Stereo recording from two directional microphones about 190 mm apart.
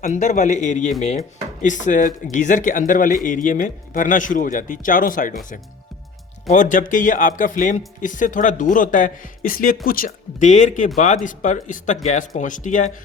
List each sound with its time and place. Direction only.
0.0 s speech: 40° left (ahead or behind)
6.5 s speech: 40° left (ahead or behind)